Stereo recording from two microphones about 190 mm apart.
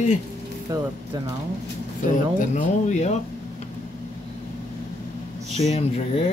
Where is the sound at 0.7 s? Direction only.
20° right (ahead or behind).